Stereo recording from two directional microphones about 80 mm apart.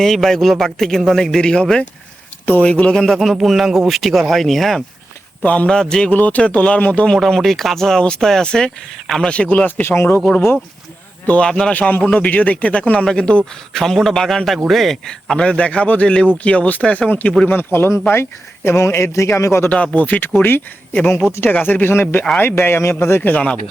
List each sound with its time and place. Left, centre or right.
0.0 s a man's voice: centre
3.0 s speech: centre
5.4 s a man's voice: centre
6.1 s a man's voice: centre
7.1 s a man's voice: centre
9.8 s speech: left
11.3 s a man's voice: centre
17.5 s a man's voice: left
19.7 s a man's voice: centre